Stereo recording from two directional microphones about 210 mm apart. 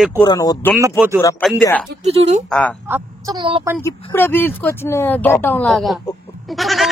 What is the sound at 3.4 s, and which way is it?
Speech, 25° right (ahead or behind).